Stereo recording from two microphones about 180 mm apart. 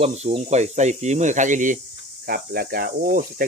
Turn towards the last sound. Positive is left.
turn(degrees=-50)  # may be behind; listen again after turning